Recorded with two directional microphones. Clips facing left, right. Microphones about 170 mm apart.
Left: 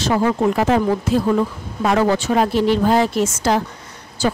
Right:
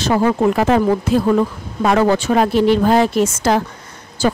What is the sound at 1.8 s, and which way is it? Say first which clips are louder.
A woman's voice: right 2 dB; 55° right (ahead or behind).